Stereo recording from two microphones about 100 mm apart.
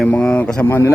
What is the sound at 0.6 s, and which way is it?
Speech, 20° left (ahead or behind).